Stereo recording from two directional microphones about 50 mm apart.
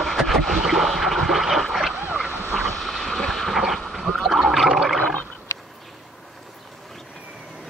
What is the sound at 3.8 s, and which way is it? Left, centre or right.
Gargling, centre.